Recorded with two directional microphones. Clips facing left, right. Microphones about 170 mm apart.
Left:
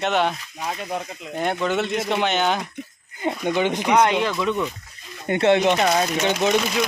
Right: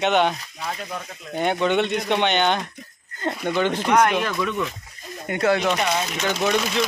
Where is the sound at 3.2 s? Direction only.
15° left (ahead or behind).